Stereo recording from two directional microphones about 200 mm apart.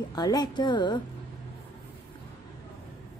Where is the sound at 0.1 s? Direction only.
20° left (ahead or behind).